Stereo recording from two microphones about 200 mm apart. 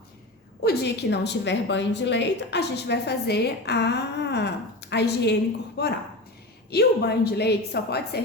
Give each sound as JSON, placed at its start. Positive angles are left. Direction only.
{"t": 0.6, "sound": "a woman's voice", "side_deg": 55}